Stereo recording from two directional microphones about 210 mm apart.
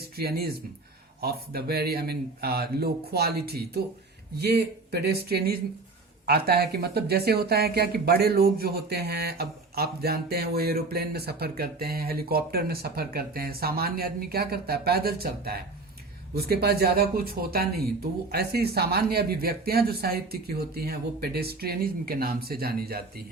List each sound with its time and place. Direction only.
0.2 s speech: 50° right (ahead or behind)